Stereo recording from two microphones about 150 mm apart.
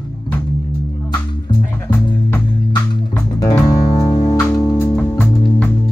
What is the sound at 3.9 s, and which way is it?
Music, 25° left (ahead or behind).